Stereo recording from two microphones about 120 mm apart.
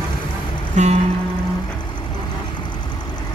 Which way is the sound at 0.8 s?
80° right.